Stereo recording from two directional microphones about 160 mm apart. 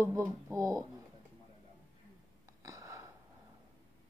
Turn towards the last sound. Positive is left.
turn(degrees=-20)  # may be behind; listen again after turning